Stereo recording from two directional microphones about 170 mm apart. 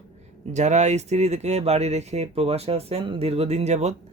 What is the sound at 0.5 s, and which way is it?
Speech, 40° right (ahead or behind).